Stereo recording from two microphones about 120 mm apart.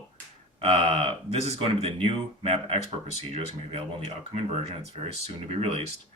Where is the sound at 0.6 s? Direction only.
60° right (ahead or behind).